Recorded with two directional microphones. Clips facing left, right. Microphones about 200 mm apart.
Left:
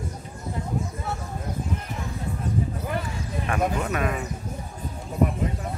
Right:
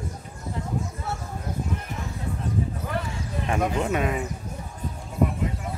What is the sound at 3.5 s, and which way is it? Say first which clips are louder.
Speech: right 1 dB; 25° right (ahead or behind).